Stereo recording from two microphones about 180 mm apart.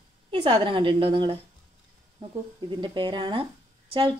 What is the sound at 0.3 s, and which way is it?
Speech, 25° right (ahead or behind).